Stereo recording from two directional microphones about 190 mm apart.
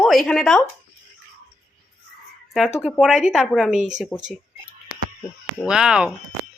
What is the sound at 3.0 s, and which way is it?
Speech, centre (ahead or behind).